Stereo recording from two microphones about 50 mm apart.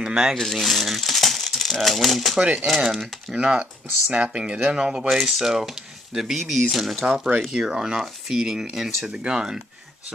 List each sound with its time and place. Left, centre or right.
0.0 s speech: centre
0.4 s speech: centre
3.3 s speech: right